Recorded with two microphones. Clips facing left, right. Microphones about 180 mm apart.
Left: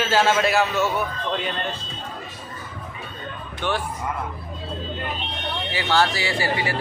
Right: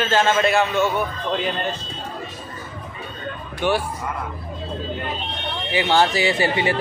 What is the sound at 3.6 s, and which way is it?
Speech, 10° right (ahead or behind).